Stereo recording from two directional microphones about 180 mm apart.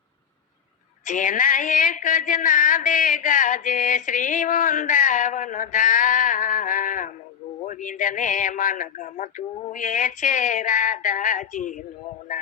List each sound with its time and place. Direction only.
1.0 s a man's voice: 45° left (ahead or behind)